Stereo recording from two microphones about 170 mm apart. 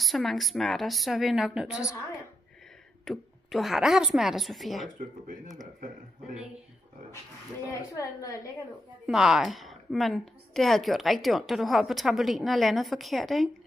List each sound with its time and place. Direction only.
0.0 s a woman's voice: centre (ahead or behind)
3.1 s a woman's voice: centre (ahead or behind)
7.9 s a woman's voice: 20° left (ahead or behind)
9.0 s a woman's voice: 5° right (ahead or behind)